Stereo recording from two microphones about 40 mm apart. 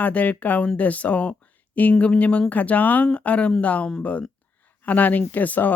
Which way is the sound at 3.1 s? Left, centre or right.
Left.